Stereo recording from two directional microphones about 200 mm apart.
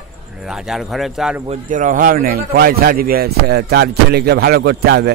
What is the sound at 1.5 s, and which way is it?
A man's voice, 40° right (ahead or behind).